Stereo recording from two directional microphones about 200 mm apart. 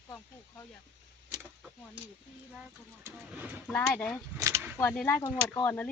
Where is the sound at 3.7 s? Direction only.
5° left (ahead or behind).